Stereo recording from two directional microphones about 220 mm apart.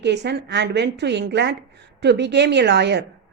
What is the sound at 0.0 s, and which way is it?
Speech, 50° right (ahead or behind).